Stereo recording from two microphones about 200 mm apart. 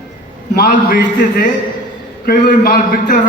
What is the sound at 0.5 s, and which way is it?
A man's voice, 50° left (ahead or behind).